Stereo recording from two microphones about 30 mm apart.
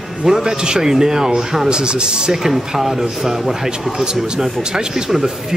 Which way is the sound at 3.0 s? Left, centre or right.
Right.